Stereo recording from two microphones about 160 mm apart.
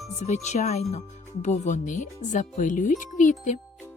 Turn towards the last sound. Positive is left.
turn(degrees=50)  # may be behind; listen again after turning